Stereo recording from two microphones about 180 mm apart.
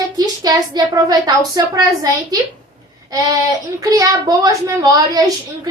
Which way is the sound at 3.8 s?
20° right (ahead or behind).